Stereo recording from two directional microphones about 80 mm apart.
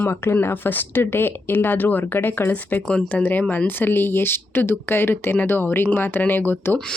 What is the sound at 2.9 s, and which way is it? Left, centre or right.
Speech, centre.